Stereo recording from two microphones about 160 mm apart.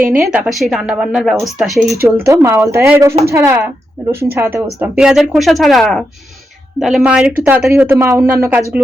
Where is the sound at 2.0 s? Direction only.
15° right (ahead or behind).